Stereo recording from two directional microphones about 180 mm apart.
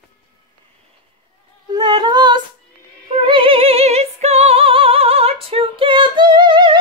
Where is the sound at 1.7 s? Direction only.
25° right (ahead or behind).